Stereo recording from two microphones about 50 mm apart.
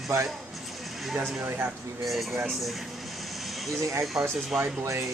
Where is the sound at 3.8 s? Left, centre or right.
Right.